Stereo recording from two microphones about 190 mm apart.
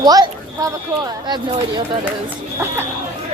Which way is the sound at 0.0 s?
20° right (ahead or behind).